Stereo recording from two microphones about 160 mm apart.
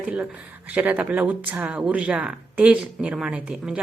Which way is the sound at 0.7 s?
10° right (ahead or behind).